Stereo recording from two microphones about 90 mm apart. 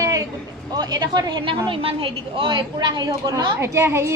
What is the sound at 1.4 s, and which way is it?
A woman's voice, 70° right (ahead or behind).